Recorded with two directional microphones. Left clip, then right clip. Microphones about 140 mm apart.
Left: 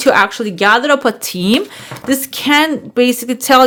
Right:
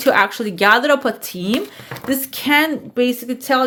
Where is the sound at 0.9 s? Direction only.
35° left (ahead or behind).